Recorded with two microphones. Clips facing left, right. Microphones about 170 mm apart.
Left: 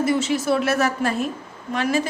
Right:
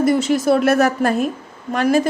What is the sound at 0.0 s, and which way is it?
A woman's voice, 45° right (ahead or behind).